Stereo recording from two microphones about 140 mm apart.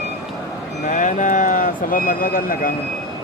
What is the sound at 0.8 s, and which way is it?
Speech, 65° left (ahead or behind).